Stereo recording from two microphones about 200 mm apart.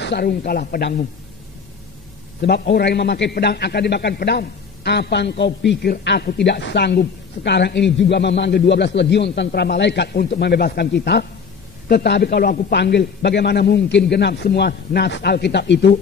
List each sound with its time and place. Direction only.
0.0 s speech: 55° left (ahead or behind)
2.4 s a man's voice: 55° left (ahead or behind)